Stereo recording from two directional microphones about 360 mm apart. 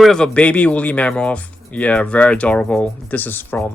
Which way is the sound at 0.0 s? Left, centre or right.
Centre.